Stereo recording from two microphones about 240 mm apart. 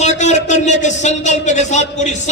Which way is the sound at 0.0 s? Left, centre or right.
Left.